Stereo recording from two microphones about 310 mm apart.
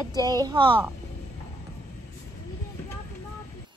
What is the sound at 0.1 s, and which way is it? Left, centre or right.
Speech, centre.